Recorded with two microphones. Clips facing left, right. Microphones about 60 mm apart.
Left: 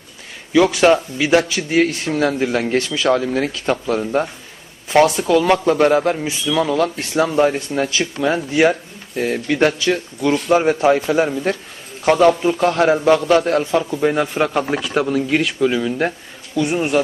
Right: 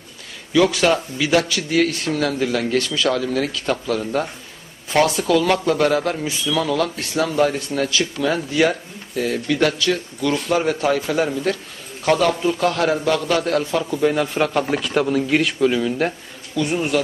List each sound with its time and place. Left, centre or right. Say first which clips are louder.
0.5 s a man's voice: left 3 dB; left
14.0 s a man's voice: left 1 dB; centre
16.6 s a man's voice: left 3 dB; centre